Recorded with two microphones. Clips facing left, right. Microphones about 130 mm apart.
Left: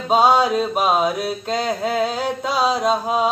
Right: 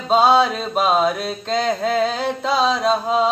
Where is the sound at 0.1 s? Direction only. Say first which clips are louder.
Even; 10° left (ahead or behind).